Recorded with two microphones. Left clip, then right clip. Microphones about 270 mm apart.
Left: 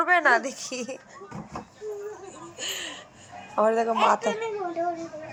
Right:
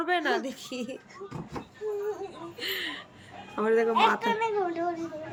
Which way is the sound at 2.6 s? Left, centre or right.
Centre.